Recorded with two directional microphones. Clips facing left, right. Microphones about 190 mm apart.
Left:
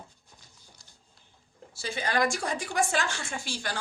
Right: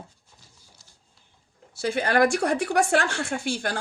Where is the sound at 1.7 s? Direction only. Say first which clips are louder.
Right 7 dB; 60° right (ahead or behind).